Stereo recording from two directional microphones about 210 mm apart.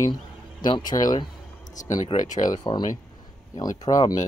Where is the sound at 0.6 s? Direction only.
20° left (ahead or behind).